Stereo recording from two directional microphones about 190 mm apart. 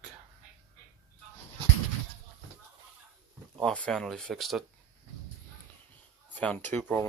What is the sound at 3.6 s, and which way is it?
Speech, 5° left (ahead or behind).